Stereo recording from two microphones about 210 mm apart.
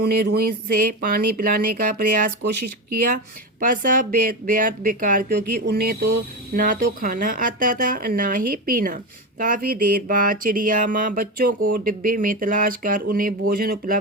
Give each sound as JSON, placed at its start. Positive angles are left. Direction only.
{"t": 0.0, "sound": "speech", "side_deg": -50}